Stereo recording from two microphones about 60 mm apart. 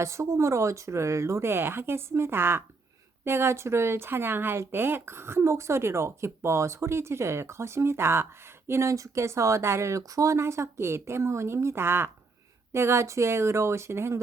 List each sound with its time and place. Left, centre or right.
0.0 s speech: right